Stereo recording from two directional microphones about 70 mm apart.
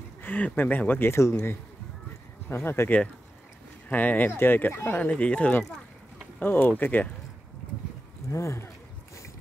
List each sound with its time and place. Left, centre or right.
0.2 s speech: left
2.5 s speech: left
3.9 s speech: left
5.0 s speech: centre
6.4 s speech: left
8.3 s speech: left